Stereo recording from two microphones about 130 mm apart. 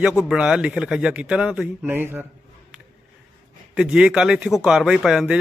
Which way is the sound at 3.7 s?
5° right (ahead or behind).